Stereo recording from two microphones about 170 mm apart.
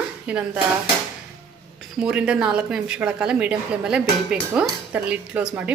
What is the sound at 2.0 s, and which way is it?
A woman's voice, 5° right (ahead or behind).